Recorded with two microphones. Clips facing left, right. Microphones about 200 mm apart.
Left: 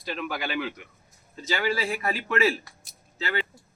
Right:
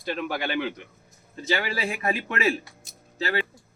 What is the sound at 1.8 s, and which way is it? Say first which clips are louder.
Speech: right 1 dB; 15° right (ahead or behind).